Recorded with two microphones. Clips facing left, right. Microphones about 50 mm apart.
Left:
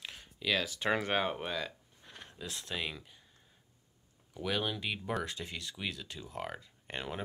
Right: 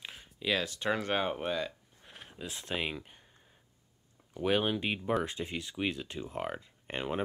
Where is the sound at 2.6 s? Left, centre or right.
Right.